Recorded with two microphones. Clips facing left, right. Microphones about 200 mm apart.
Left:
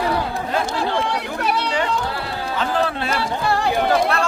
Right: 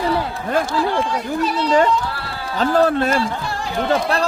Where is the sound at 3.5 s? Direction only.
65° left (ahead or behind).